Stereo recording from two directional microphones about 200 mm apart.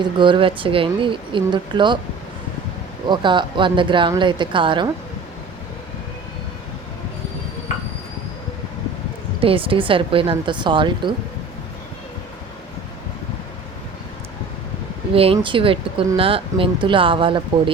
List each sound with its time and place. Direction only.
0.0 s speech: 25° right (ahead or behind)
3.1 s speech: 25° right (ahead or behind)
9.4 s speech: 25° right (ahead or behind)
15.1 s speech: 30° right (ahead or behind)